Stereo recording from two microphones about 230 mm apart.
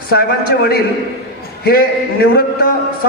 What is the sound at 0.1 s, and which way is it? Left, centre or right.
A man's voice, left.